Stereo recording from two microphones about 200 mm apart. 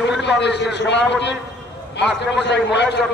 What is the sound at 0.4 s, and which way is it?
Speech, 60° left (ahead or behind).